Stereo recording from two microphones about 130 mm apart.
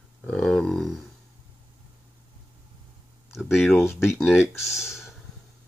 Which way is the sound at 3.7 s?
20° left (ahead or behind).